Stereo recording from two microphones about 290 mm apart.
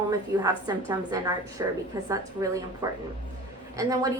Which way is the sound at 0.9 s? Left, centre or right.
Centre.